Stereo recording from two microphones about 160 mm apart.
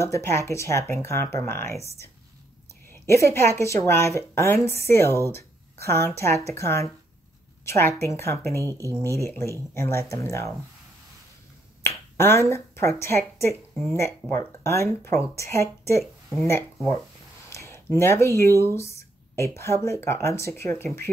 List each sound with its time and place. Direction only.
0.0 s a woman's voice: 15° left (ahead or behind)
11.8 s a woman's voice: 15° left (ahead or behind)
16.0 s speech: centre (ahead or behind)
17.5 s speech: 15° left (ahead or behind)